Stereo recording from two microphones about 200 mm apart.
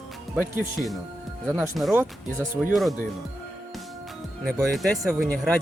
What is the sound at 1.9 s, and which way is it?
Speech, 10° right (ahead or behind).